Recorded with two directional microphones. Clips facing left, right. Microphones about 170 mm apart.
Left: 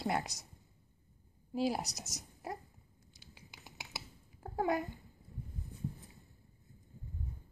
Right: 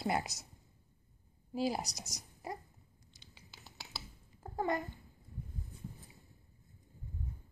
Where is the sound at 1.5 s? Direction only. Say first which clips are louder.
Left 1 dB; centre (ahead or behind).